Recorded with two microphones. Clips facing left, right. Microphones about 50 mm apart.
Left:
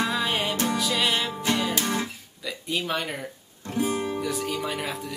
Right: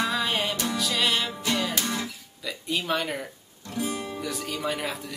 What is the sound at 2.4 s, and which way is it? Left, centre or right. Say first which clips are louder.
Speech: even; centre.